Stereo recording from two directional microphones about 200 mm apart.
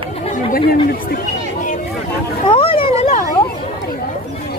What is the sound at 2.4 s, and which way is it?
Speech, 25° left (ahead or behind).